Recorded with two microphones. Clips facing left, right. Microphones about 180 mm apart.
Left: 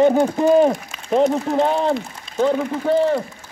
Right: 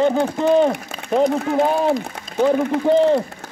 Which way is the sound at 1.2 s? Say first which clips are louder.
Right 2 dB; 5° right (ahead or behind).